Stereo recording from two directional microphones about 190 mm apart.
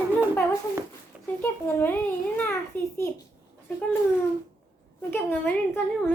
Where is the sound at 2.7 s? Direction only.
10° left (ahead or behind).